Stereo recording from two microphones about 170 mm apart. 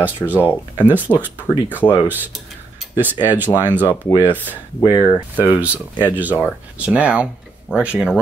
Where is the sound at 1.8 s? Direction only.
10° left (ahead or behind).